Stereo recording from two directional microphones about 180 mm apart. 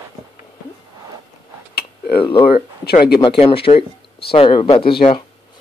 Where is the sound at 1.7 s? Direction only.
60° left (ahead or behind).